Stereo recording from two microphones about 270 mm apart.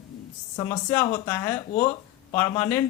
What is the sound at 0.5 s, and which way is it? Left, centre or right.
A man's voice, centre.